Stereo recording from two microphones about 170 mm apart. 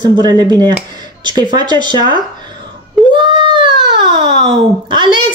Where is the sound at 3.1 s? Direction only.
30° right (ahead or behind).